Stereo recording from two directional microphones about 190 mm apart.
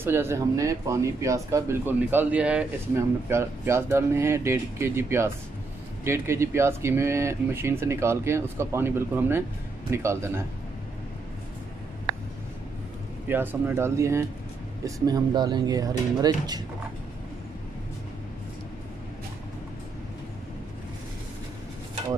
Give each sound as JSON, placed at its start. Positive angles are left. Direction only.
{"t": 0.0, "sound": "speech", "side_deg": -15}
{"t": 13.3, "sound": "speech", "side_deg": -10}